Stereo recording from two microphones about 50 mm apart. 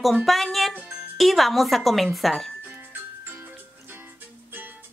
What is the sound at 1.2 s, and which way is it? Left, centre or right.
Speech, centre.